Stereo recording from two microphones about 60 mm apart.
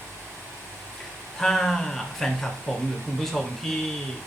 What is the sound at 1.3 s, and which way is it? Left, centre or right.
Speech, centre.